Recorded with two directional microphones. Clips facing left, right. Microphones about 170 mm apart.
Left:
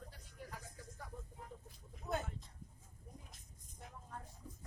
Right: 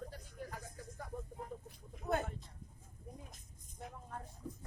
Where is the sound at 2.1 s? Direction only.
55° right (ahead or behind).